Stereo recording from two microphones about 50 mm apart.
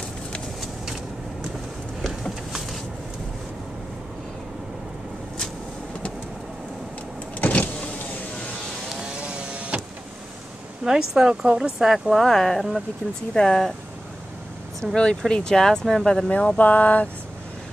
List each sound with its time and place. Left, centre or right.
2.0 s a sound: centre
7.3 s power windows: left
8.8 s power windows: centre
10.8 s speech: centre
11.8 s speech: centre
15.0 s speech: centre
16.3 s a sound: left